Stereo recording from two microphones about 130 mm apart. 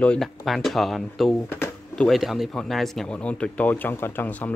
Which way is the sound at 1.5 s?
15° left (ahead or behind).